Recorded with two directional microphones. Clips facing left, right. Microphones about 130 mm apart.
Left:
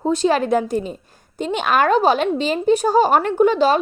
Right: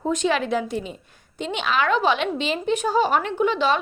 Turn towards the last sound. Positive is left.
turn(degrees=45)  # may be behind; listen again after turning